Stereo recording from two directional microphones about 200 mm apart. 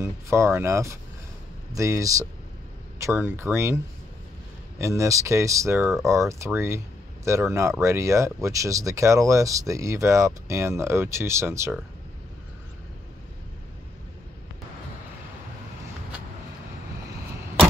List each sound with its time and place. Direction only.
0.0 s speech: 15° right (ahead or behind)